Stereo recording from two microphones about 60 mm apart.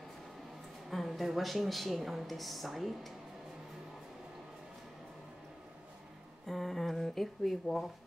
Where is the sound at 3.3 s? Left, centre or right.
Centre.